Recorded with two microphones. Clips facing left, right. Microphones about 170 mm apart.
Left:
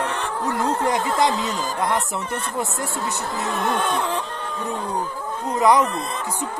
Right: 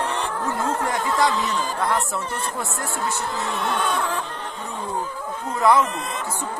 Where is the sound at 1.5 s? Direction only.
40° left (ahead or behind).